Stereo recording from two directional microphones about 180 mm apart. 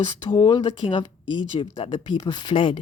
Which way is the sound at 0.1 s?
25° left (ahead or behind).